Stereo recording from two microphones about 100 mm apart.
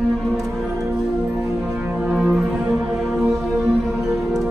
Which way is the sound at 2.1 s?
5° right (ahead or behind).